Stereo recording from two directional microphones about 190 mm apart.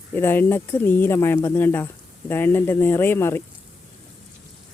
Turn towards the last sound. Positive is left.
turn(degrees=10)  # may be behind; listen again after turning